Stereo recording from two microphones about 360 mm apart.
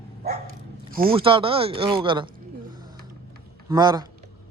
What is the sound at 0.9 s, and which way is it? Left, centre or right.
Speech, centre.